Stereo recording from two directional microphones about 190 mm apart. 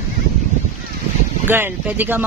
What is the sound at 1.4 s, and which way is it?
Speech, 10° right (ahead or behind).